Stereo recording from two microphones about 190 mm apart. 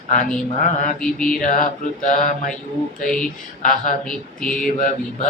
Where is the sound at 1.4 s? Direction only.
40° left (ahead or behind).